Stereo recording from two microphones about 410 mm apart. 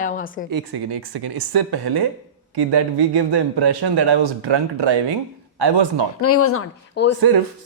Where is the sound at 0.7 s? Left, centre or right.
Right.